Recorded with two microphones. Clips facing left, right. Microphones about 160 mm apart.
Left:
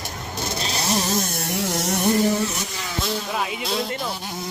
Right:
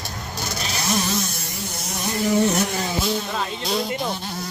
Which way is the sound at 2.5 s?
60° right (ahead or behind).